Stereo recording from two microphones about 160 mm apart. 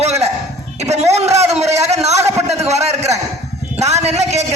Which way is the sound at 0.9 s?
40° right (ahead or behind).